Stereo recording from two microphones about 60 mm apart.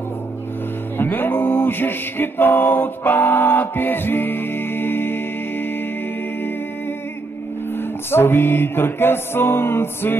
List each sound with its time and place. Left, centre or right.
0.9 s music: left
7.7 s music: left